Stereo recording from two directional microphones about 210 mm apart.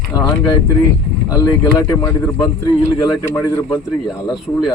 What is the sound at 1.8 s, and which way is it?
Speech, 15° left (ahead or behind).